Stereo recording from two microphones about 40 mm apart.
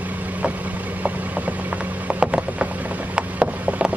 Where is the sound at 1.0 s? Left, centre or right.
Right.